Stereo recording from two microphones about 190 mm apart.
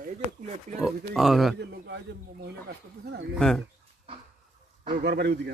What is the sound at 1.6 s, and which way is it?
Speech, 65° right (ahead or behind).